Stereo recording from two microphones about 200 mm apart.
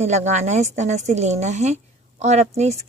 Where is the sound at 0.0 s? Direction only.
35° right (ahead or behind).